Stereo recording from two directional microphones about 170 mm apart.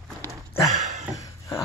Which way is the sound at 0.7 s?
40° right (ahead or behind).